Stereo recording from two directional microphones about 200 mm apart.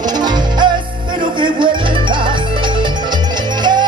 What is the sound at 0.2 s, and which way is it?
Music, 20° right (ahead or behind).